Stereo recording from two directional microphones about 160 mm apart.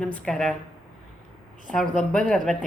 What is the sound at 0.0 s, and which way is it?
Speech, 5° left (ahead or behind).